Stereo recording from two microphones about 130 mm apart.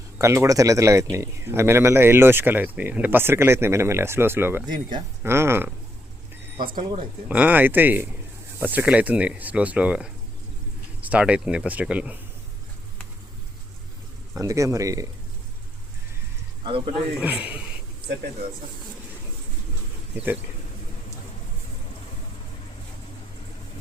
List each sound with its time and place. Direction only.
0.2 s speech: 20° right (ahead or behind)
6.7 s speech: 45° right (ahead or behind)
7.3 s speech: 10° right (ahead or behind)
14.3 s speech: 25° right (ahead or behind)
16.6 s speech: 40° right (ahead or behind)
17.2 s speech: 10° right (ahead or behind)
20.1 s speech: 10° right (ahead or behind)